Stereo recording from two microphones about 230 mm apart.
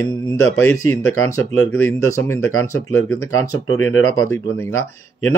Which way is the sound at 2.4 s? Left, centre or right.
Left.